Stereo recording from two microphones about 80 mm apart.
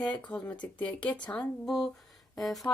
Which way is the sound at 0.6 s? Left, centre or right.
Centre.